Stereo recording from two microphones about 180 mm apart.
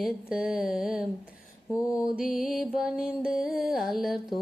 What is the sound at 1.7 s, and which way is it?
Mantra, 20° left (ahead or behind).